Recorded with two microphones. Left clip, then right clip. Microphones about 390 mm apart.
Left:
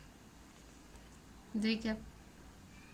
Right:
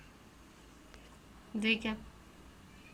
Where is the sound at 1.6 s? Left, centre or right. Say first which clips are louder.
Right 5 dB; centre.